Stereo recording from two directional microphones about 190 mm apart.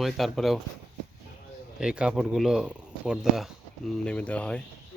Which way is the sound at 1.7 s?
5° right (ahead or behind).